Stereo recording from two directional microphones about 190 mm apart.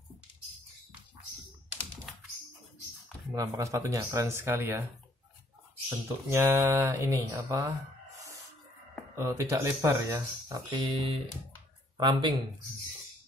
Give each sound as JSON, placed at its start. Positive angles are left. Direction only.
{"t": 3.3, "sound": "speech", "side_deg": -15}
{"t": 5.9, "sound": "speech", "side_deg": -15}
{"t": 9.1, "sound": "speech", "side_deg": -15}